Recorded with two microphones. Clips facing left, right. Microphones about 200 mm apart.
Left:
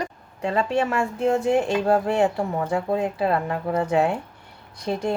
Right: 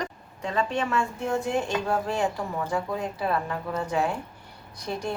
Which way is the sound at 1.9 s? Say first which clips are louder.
Left 7 dB; 70° left (ahead or behind).